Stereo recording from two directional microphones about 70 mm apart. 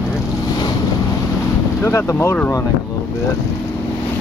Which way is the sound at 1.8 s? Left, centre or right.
Left.